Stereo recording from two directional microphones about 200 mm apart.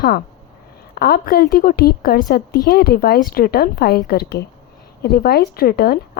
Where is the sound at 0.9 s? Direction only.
50° left (ahead or behind).